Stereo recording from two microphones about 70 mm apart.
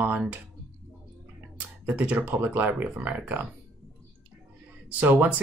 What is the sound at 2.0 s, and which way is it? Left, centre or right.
Speech, right.